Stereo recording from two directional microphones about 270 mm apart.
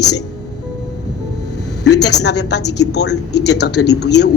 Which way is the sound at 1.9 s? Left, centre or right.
Left.